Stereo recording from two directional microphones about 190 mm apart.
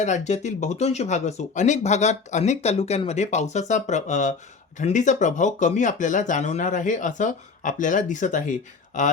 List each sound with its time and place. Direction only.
0.0 s speech: 40° left (ahead or behind)